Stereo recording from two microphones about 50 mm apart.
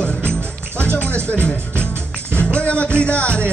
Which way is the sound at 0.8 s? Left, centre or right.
Left.